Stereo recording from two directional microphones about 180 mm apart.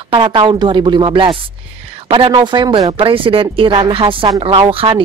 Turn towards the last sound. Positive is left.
turn(degrees=-30)  # may be behind; listen again after turning